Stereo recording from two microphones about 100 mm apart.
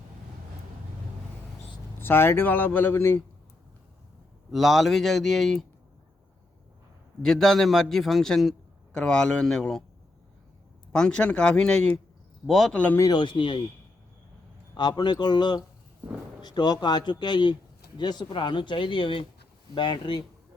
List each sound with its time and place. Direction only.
2.0 s speech: 20° left (ahead or behind)
4.5 s a man's voice: centre (ahead or behind)
7.2 s a man's voice: 5° left (ahead or behind)
10.9 s a man's voice: 10° left (ahead or behind)
12.7 s speech: 15° left (ahead or behind)
13.0 s a man's voice: 45° left (ahead or behind)
14.8 s a man's voice: 45° left (ahead or behind)